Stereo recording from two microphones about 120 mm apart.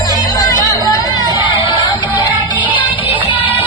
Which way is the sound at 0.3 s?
30° left (ahead or behind).